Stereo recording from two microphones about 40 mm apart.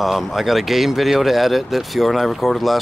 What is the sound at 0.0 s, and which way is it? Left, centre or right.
Speech, centre.